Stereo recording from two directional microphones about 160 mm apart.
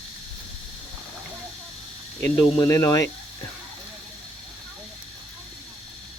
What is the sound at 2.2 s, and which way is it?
Speech, 15° left (ahead or behind).